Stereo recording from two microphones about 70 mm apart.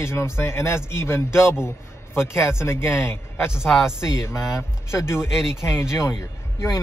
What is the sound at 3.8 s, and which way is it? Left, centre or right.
Speech, left.